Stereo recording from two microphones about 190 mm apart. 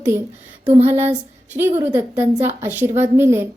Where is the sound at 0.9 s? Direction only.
10° right (ahead or behind).